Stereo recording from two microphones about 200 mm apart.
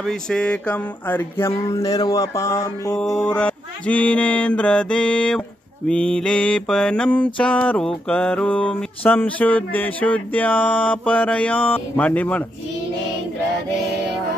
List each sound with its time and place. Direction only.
0.0 s mantra: 5° left (ahead or behind)
3.1 s music: 5° left (ahead or behind)
7.3 s mantra: 5° left (ahead or behind)